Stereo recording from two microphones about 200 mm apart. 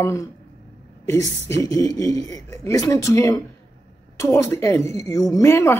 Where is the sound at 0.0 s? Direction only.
15° left (ahead or behind).